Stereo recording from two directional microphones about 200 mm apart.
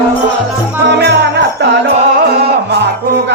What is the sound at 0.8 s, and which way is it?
Jingle bell, 60° right (ahead or behind).